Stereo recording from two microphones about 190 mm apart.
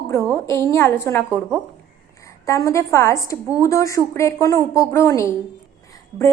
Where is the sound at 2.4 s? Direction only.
15° left (ahead or behind).